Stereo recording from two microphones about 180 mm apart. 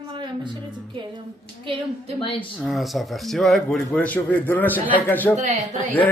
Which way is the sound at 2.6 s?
Centre (ahead or behind).